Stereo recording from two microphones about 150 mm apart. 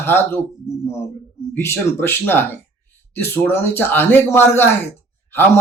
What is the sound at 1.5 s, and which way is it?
Speech, 15° left (ahead or behind).